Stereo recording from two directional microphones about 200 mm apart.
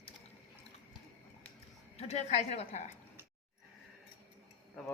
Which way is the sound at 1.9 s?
35° left (ahead or behind).